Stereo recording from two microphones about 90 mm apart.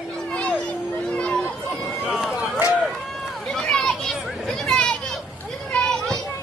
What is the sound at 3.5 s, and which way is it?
Children playing, 5° left (ahead or behind).